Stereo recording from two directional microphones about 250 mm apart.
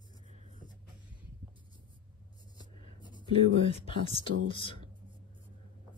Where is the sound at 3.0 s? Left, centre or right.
Centre.